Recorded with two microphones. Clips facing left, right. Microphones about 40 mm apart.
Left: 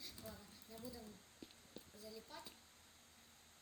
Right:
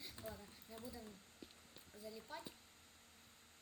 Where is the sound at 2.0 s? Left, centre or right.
Centre.